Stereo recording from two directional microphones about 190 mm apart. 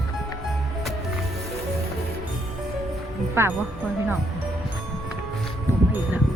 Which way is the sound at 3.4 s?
15° right (ahead or behind).